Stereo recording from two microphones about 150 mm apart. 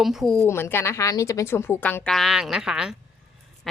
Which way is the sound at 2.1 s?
5° right (ahead or behind).